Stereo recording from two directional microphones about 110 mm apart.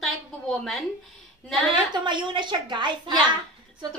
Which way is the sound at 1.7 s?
45° right (ahead or behind).